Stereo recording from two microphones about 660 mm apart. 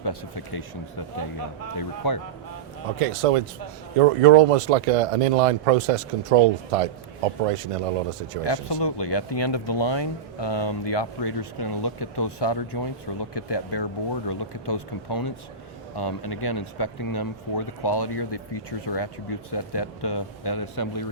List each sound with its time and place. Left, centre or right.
0.0 s speech: left
1.7 s speech: left
3.0 s speech: right
8.4 s speech: left